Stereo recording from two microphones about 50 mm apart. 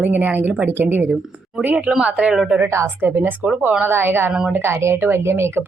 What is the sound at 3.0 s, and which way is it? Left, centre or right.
A woman's voice, right.